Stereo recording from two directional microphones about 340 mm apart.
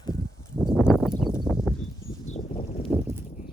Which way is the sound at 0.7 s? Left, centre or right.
Centre.